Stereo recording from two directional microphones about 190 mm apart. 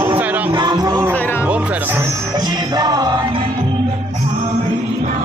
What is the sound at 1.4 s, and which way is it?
Music, 5° right (ahead or behind).